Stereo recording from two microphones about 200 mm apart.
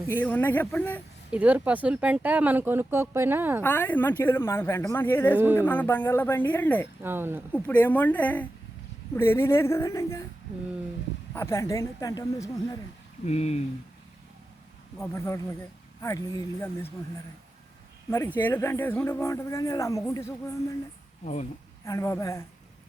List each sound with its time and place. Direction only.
0.1 s speech: 10° left (ahead or behind)
1.3 s speech: 5° right (ahead or behind)
3.6 s speech: 10° left (ahead or behind)
7.0 s speech: 10° right (ahead or behind)
7.5 s speech: 10° left (ahead or behind)
11.3 s speech: 15° left (ahead or behind)
13.2 s speech: 35° left (ahead or behind)
14.9 s speech: 15° left (ahead or behind)
18.3 s speech: 10° left (ahead or behind)
21.8 s speech: 15° left (ahead or behind)